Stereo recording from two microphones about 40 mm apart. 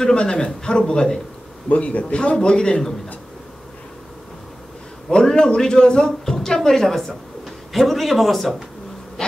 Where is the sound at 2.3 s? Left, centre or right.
Centre.